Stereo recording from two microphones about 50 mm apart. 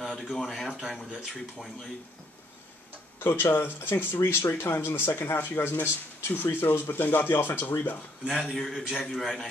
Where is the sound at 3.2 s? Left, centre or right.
Left.